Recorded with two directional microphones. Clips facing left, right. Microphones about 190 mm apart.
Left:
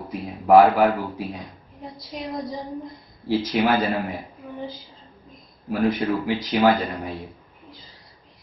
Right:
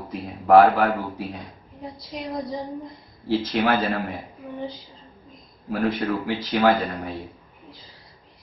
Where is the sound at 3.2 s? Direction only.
15° left (ahead or behind).